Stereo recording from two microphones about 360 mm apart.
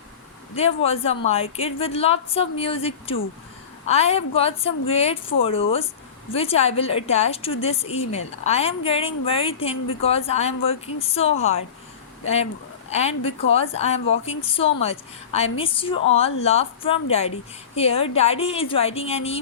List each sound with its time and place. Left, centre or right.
0.5 s a woman's voice: centre
12.9 s a woman's voice: centre